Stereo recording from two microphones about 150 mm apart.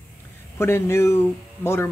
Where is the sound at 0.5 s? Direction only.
15° left (ahead or behind).